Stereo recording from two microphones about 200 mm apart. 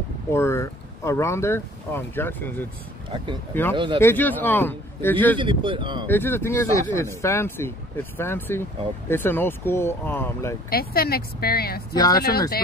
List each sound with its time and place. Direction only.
0.3 s speech: 15° left (ahead or behind)
3.7 s speech: 25° right (ahead or behind)
4.0 s speech: 10° left (ahead or behind)
5.4 s speech: 25° right (ahead or behind)
6.0 s speech: 10° left (ahead or behind)
10.7 s speech: 50° left (ahead or behind)
11.9 s speech: 20° left (ahead or behind)
12.2 s speech: 50° left (ahead or behind)